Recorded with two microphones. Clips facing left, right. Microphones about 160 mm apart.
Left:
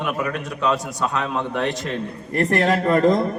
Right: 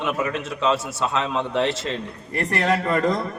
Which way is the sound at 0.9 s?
10° left (ahead or behind).